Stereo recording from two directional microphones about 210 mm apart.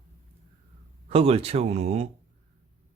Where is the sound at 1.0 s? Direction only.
25° right (ahead or behind).